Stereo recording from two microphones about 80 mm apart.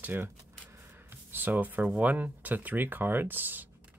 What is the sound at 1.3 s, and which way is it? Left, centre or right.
Speech, right.